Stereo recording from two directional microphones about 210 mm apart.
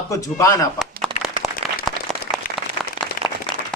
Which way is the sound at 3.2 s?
45° left (ahead or behind).